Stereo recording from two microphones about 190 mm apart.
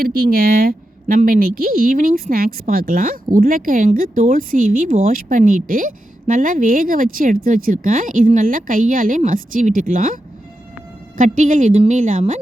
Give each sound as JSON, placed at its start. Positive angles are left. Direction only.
{"t": 0.0, "sound": "a woman's voice", "side_deg": -50}
{"t": 11.2, "sound": "a woman's voice", "side_deg": -40}